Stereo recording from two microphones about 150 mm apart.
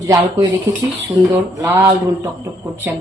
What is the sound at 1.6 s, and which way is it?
Speech, 15° right (ahead or behind).